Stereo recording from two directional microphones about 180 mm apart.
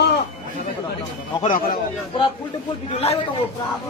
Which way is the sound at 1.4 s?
50° left (ahead or behind).